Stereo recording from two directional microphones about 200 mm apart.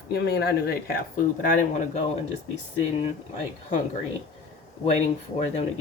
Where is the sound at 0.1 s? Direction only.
50° left (ahead or behind).